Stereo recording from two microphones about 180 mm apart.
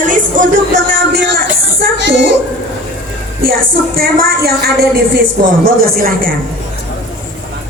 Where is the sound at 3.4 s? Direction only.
55° right (ahead or behind).